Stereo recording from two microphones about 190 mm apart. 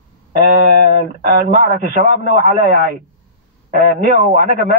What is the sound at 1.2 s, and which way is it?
A man's voice, 45° right (ahead or behind).